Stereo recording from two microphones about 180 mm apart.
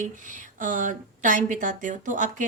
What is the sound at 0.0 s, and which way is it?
A woman's voice, 45° right (ahead or behind).